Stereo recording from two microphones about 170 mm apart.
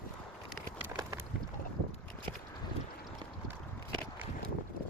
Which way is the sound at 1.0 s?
20° right (ahead or behind).